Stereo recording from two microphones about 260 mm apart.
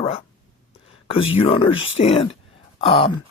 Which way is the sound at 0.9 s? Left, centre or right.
Left.